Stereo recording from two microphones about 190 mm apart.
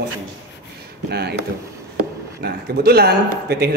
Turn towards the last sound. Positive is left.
turn(degrees=-60)  # may be behind; listen again after turning